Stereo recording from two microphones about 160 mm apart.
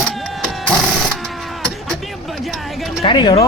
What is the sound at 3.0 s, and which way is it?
Speech, 35° left (ahead or behind).